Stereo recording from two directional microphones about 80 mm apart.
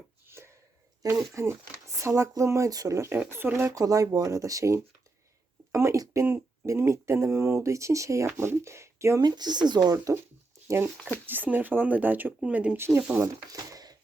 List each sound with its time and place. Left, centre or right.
0.3 s a sound: right
1.0 s speech: right
3.7 s speech: right
6.2 s a sound: right
6.7 s speech: right
9.2 s speech: right
9.9 s speech: right
11.3 s speech: right
12.7 s speech: right
13.2 s speech: right